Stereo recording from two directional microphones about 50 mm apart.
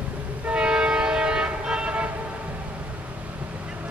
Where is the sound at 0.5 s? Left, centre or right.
Centre.